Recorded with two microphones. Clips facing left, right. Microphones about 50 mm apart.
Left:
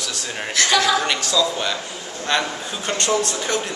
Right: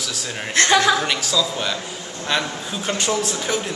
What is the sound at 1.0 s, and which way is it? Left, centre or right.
A man's voice, centre.